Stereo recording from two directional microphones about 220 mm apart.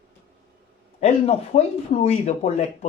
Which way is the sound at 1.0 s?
30° left (ahead or behind).